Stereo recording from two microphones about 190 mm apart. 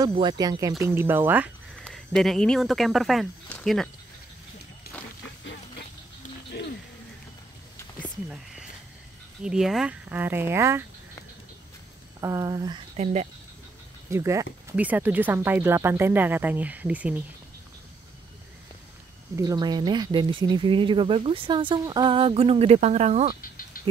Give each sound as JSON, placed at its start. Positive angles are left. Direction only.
{"t": 0.1, "sound": "speech", "side_deg": -25}
{"t": 1.8, "sound": "speech", "side_deg": 5}
{"t": 4.9, "sound": "a sound", "side_deg": 55}
{"t": 5.4, "sound": "a sound", "side_deg": 70}
{"t": 6.5, "sound": "a sound", "side_deg": 55}
{"t": 9.4, "sound": "speech", "side_deg": -5}
{"t": 12.2, "sound": "speech", "side_deg": -15}
{"t": 12.9, "sound": "speech", "side_deg": -35}
{"t": 14.1, "sound": "speech", "side_deg": -15}
{"t": 19.3, "sound": "speech", "side_deg": -20}
{"t": 23.8, "sound": "rattle", "side_deg": 50}